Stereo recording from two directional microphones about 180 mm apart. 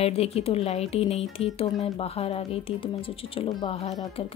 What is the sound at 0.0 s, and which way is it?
A woman's voice, 35° left (ahead or behind).